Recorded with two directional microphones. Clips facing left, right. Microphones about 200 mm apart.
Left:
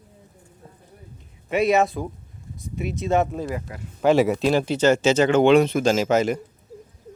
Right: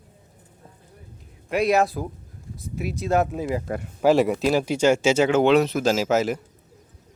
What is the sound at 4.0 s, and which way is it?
Speech, centre (ahead or behind).